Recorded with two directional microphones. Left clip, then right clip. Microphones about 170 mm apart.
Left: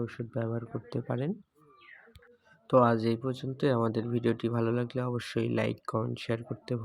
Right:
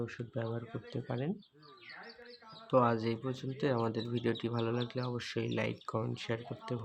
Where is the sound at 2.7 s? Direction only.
25° left (ahead or behind).